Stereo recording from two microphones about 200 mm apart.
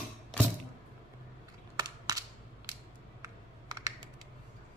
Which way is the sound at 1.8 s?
20° right (ahead or behind).